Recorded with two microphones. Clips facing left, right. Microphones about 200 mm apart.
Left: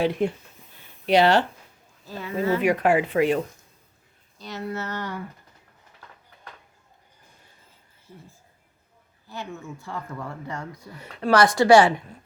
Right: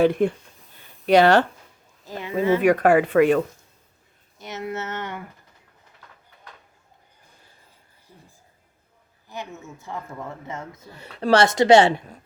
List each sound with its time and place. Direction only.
0.0 s speech: 50° right (ahead or behind)
2.0 s speech: 15° right (ahead or behind)
2.6 s speech: 50° right (ahead or behind)
4.4 s speech: 20° right (ahead or behind)
9.3 s speech: 20° right (ahead or behind)